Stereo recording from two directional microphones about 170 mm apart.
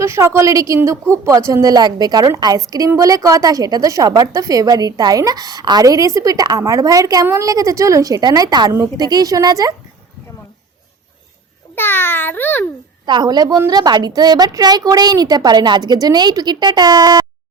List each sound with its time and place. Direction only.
0.0 s a woman's voice: 15° right (ahead or behind)
11.7 s a child's voice: 10° left (ahead or behind)
13.1 s a woman's voice: 25° right (ahead or behind)